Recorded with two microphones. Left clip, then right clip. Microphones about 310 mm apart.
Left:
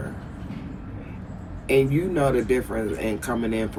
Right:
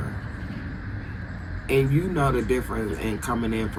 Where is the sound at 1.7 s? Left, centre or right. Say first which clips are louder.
Left 3 dB; centre.